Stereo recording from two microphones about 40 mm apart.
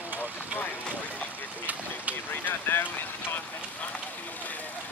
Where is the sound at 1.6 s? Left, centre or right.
Right.